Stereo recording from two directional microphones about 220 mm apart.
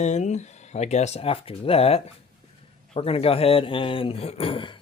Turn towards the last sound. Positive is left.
turn(degrees=20)  # may be behind; listen again after turning